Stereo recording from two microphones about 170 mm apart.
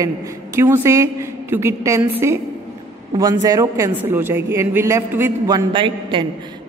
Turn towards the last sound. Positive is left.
turn(degrees=-30)  # may be behind; listen again after turning